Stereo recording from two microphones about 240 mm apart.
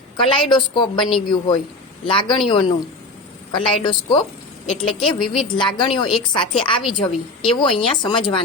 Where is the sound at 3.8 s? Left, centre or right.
Centre.